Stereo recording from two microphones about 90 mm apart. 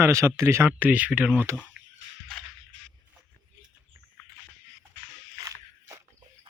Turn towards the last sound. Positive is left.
turn(degrees=-40)  # may be behind; listen again after turning